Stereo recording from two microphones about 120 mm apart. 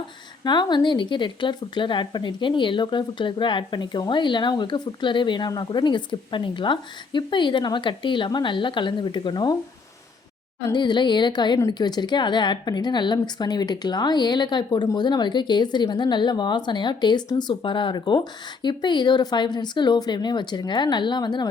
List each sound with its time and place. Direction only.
0.4 s speech: 40° left (ahead or behind)
10.7 s speech: 40° left (ahead or behind)